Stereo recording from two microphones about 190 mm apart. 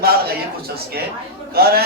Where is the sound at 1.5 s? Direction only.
55° right (ahead or behind).